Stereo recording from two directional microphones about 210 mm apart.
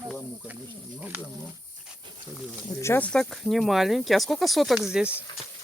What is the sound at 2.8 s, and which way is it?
Speech, 10° left (ahead or behind).